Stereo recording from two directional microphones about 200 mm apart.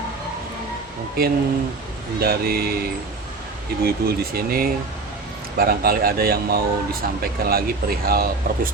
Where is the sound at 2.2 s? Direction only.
50° right (ahead or behind).